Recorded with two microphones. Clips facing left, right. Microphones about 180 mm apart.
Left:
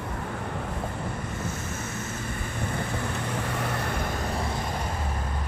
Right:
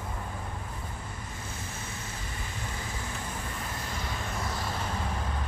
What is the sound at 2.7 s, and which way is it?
Vehicle, 70° left (ahead or behind).